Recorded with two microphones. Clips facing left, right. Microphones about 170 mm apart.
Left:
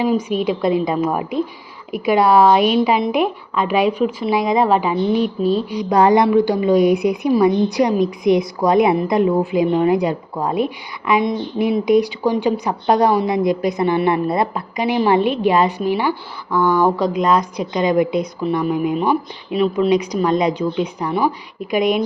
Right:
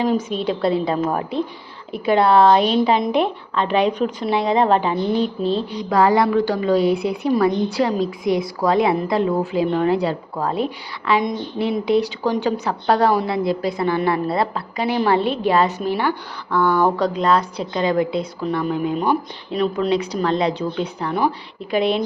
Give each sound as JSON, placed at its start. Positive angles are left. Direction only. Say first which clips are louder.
{"t": 0.0, "sound": "a woman's voice", "louder": "left 2 dB", "side_deg": 10}